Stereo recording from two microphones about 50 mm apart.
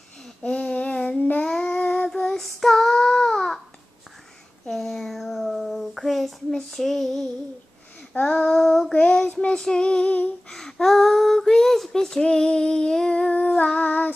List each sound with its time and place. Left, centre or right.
0.4 s child singing: left
4.6 s child singing: centre
8.1 s female singing: left
8.5 s child singing: centre
8.9 s child singing: centre
10.5 s child singing: centre; by 14.1 s left